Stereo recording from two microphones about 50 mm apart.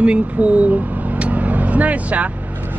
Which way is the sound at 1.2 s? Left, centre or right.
Right.